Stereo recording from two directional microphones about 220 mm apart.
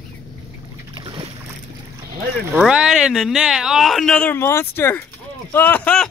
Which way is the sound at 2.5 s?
5° right (ahead or behind).